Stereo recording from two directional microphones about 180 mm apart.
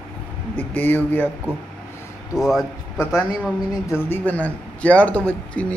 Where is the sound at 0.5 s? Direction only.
10° left (ahead or behind).